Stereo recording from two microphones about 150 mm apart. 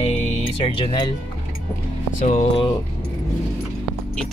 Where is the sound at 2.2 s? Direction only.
50° left (ahead or behind).